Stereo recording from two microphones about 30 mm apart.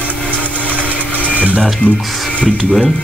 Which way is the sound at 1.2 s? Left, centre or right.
Right.